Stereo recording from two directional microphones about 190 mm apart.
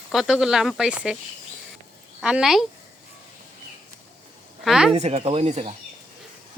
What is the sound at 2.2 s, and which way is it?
Speech, 5° right (ahead or behind).